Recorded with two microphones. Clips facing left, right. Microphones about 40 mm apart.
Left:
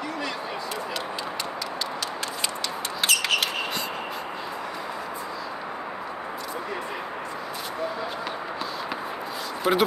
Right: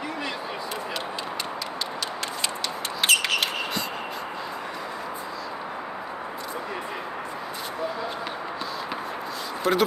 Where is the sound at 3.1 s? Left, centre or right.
Right.